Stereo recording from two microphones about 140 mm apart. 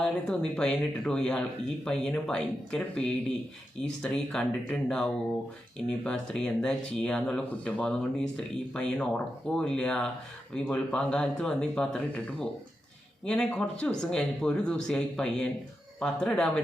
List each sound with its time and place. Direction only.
0.0 s speech: 5° left (ahead or behind)